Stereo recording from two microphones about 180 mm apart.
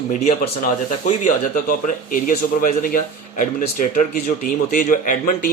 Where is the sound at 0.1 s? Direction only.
40° left (ahead or behind).